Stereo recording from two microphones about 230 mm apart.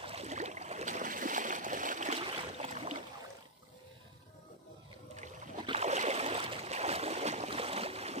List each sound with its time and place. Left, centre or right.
0.0 s stream: right
5.1 s boat: right